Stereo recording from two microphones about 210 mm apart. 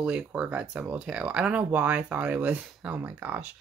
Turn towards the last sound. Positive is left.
turn(degrees=-10)  # may be behind; listen again after turning